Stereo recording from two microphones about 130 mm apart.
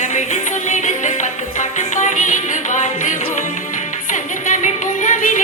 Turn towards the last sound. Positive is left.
turn(degrees=85)